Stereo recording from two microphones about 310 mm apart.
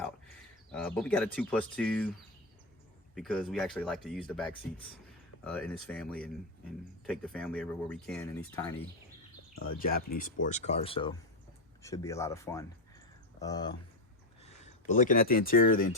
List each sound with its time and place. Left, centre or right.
0.7 s speech: centre
3.2 s speech: centre
9.6 s speech: left